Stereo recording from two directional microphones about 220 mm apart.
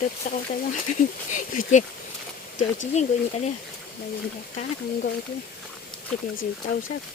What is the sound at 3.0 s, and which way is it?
Speech, 30° left (ahead or behind).